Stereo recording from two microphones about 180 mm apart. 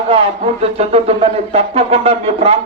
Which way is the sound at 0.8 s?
35° right (ahead or behind).